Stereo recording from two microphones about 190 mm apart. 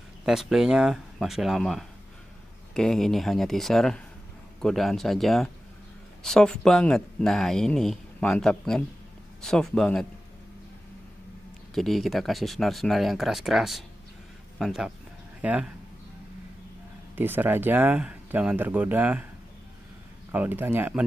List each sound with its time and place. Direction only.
0.2 s speech: centre (ahead or behind)
11.7 s speech: centre (ahead or behind)
17.1 s speech: 10° right (ahead or behind)
20.2 s speech: 10° right (ahead or behind)